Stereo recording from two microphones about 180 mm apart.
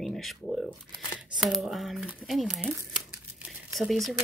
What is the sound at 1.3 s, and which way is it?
Speech, centre (ahead or behind).